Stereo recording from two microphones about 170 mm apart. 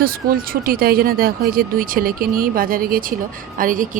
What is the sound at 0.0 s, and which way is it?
A woman's voice, 60° right (ahead or behind).